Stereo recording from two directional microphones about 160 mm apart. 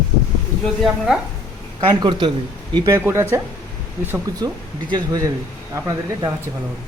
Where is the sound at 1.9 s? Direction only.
25° right (ahead or behind).